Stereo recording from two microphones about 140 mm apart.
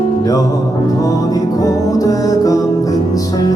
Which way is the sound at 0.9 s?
25° left (ahead or behind).